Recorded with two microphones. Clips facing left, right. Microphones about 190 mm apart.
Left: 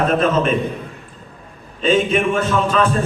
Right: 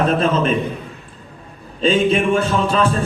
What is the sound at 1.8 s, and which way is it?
A man's voice, 35° right (ahead or behind).